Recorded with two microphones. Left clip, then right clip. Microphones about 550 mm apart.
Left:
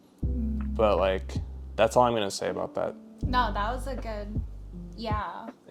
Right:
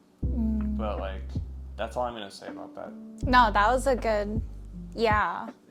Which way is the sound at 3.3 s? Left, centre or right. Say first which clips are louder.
Right 7 dB; right.